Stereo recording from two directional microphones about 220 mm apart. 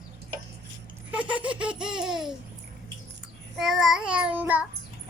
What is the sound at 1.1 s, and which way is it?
Laughter, 5° right (ahead or behind).